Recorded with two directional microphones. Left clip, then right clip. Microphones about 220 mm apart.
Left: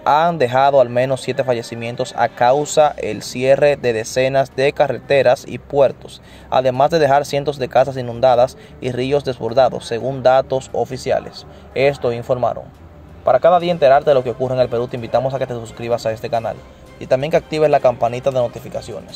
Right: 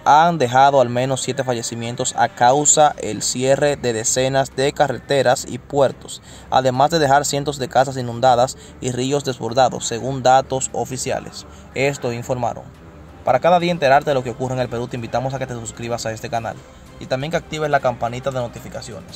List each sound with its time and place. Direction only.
0.0 s speech: 10° right (ahead or behind)
17.0 s speech: centre (ahead or behind)